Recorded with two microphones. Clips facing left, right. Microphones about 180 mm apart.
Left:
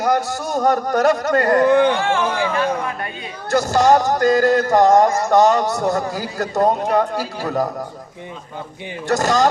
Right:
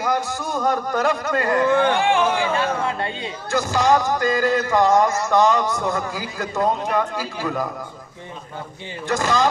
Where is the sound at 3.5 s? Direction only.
40° left (ahead or behind).